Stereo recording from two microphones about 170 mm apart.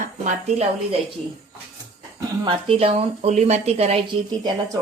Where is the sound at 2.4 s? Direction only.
30° right (ahead or behind).